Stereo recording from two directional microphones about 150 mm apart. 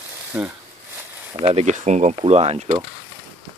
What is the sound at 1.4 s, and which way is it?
Speech, 45° right (ahead or behind).